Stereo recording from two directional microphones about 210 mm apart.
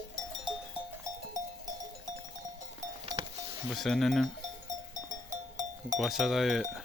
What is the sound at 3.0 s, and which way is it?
Music, 25° right (ahead or behind).